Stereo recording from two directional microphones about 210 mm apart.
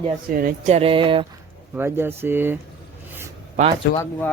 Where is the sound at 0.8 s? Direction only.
25° right (ahead or behind).